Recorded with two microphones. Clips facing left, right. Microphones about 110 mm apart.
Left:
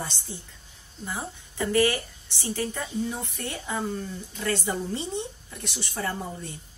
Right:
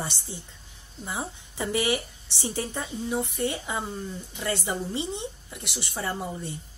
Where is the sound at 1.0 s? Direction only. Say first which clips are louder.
Right 1 dB; 20° right (ahead or behind).